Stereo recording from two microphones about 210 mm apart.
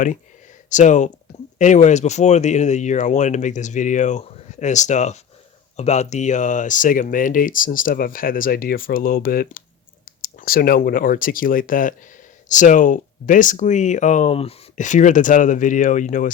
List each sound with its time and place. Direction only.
0.7 s speech: 35° left (ahead or behind)